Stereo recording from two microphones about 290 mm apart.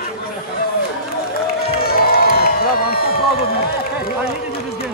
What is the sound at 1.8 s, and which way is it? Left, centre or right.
Crowd, left.